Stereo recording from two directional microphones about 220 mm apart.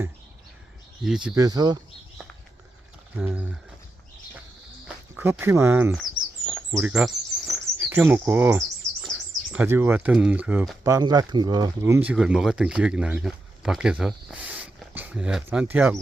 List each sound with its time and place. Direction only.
1.0 s speech: centre (ahead or behind)
1.4 s speech: 15° right (ahead or behind)
3.2 s speech: 5° right (ahead or behind)
4.9 s speech: 10° right (ahead or behind)